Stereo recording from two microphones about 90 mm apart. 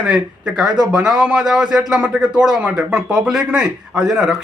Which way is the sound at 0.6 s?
50° right (ahead or behind).